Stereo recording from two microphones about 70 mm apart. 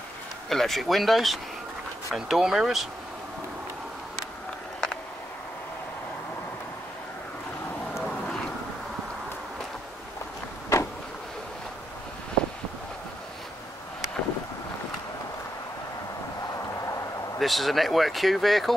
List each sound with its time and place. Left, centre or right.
0.5 s speech: centre
8.0 s vehicle: centre
10.7 s vehicle: left
17.4 s speech: centre